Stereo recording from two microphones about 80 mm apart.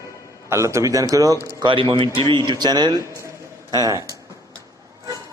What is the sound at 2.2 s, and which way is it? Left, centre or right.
Speech, right.